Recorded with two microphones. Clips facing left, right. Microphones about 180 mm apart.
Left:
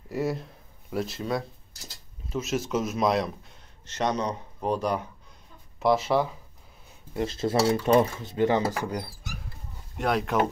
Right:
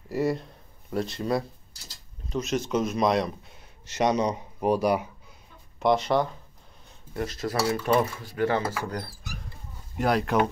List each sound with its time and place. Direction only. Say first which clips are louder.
0.1 s speech: right 2 dB; centre (ahead or behind)
3.8 s speech: right 4 dB; 10° right (ahead or behind)
5.8 s speech: even; 5° left (ahead or behind)
7.2 s speech: left 3 dB; 25° left (ahead or behind)
9.9 s speech: right 2 dB; centre (ahead or behind)